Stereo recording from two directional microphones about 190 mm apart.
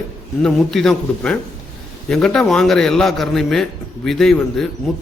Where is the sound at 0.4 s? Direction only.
Centre (ahead or behind).